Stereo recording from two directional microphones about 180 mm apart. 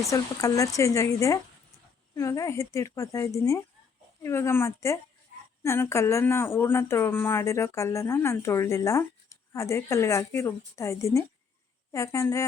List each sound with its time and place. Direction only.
0.0 s speech: 15° left (ahead or behind)